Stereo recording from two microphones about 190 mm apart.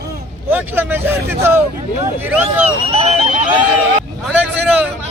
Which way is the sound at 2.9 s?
35° right (ahead or behind).